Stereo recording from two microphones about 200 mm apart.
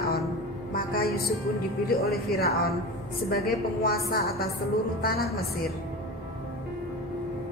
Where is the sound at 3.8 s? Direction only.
50° left (ahead or behind).